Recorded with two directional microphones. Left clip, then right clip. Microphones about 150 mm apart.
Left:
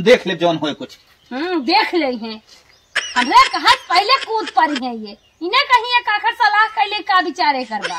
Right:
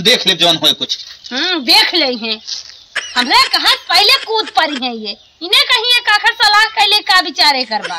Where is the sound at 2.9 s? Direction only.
Centre (ahead or behind).